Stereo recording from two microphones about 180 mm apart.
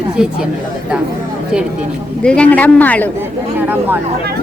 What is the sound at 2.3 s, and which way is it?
Speech, 5° left (ahead or behind).